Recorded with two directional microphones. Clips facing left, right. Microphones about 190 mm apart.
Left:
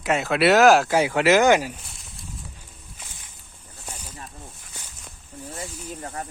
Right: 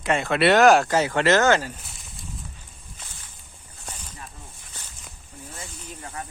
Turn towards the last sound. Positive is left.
turn(degrees=40)  # may be behind; listen again after turning